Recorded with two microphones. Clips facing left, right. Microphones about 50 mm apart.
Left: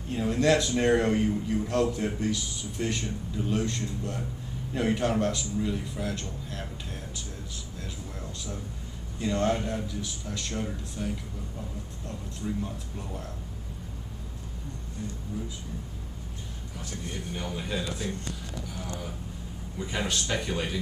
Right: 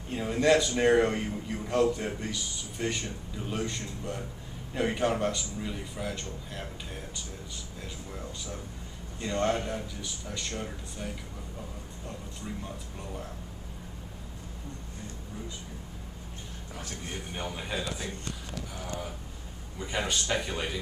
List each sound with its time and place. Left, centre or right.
0.1 s a man's voice: centre
7.8 s a sound: centre
9.2 s a man's voice: centre
12.6 s a man's voice: centre
17.6 s speech: centre
19.8 s a man's voice: centre